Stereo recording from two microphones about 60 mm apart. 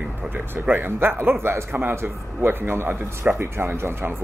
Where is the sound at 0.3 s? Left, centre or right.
Right.